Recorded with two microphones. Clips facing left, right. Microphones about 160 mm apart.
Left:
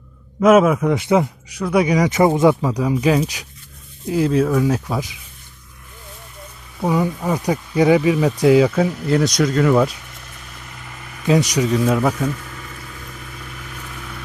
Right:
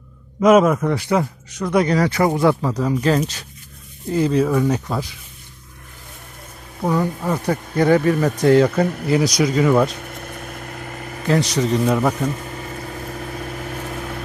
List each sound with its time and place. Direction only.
0.4 s speech: 5° left (ahead or behind)
0.9 s speech: 20° left (ahead or behind)
2.6 s speech: 10° left (ahead or behind)
6.8 s speech: 10° left (ahead or behind)
9.9 s vehicle: 55° right (ahead or behind)
11.3 s speech: 15° left (ahead or behind)
12.4 s vehicle: 40° right (ahead or behind)